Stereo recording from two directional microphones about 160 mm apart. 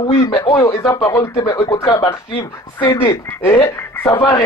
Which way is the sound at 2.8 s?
30° left (ahead or behind).